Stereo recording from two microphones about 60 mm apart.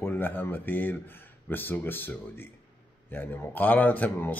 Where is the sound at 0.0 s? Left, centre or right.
Left.